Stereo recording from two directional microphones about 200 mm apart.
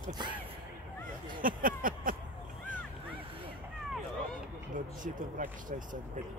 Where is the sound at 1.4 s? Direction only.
45° right (ahead or behind).